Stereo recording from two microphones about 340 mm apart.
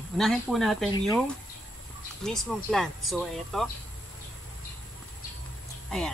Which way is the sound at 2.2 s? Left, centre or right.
Centre.